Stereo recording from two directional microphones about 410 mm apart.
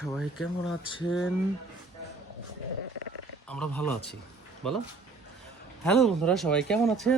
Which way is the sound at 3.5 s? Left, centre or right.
Centre.